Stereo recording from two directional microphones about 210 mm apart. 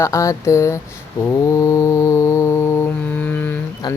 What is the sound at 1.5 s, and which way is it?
Music, 15° left (ahead or behind).